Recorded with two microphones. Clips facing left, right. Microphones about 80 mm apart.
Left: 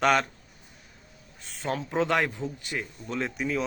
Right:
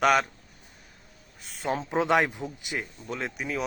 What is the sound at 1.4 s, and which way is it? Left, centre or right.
Speech, centre.